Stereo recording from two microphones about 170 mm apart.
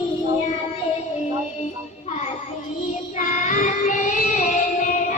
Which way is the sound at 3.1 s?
45° left (ahead or behind).